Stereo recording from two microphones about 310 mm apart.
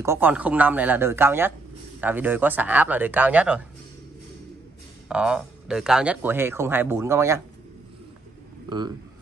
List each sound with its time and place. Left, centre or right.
0.0 s speech: centre
5.0 s speech: centre
8.6 s speech: centre